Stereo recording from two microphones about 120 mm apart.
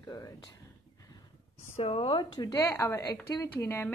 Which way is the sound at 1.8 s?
50° left (ahead or behind).